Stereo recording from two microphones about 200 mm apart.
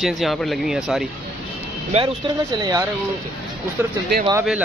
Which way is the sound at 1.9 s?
30° right (ahead or behind).